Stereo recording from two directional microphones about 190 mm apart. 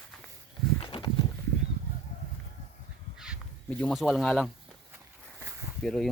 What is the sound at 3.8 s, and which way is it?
Speech, 5° left (ahead or behind).